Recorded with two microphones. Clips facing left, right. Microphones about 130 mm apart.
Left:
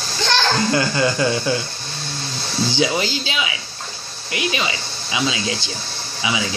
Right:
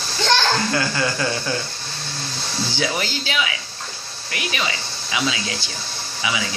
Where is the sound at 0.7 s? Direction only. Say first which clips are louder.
Left 4 dB; 20° left (ahead or behind).